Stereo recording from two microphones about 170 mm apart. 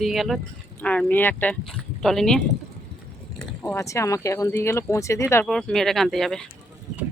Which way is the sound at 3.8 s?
20° left (ahead or behind).